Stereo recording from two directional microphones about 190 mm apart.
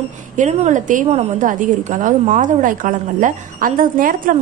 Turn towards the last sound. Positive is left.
turn(degrees=-45)  # may be behind; listen again after turning